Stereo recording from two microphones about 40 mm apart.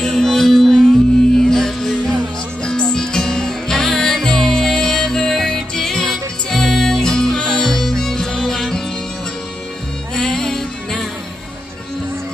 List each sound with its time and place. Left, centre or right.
0.0 s music: centre
10.1 s music: centre